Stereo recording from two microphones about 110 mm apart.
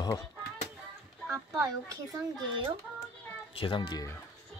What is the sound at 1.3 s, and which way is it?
Speech, 30° right (ahead or behind).